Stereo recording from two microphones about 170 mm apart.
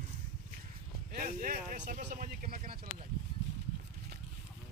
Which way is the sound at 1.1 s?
55° right (ahead or behind).